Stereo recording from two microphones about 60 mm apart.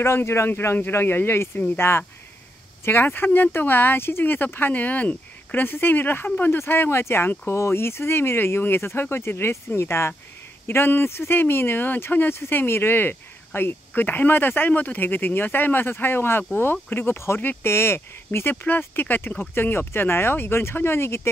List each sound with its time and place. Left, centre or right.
0.0 s speech: left